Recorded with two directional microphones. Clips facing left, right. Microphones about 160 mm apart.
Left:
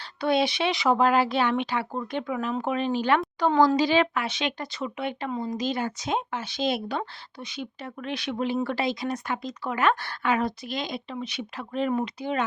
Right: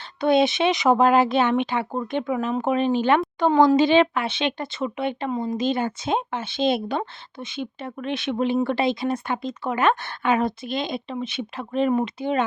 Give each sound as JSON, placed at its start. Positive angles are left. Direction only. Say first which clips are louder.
{"t": 0.2, "sound": "speech", "louder": "right 5 dB", "side_deg": -20}